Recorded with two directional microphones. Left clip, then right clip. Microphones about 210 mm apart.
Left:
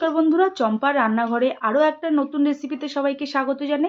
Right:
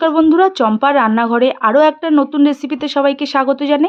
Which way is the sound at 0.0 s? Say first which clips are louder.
Right 8 dB; 60° right (ahead or behind).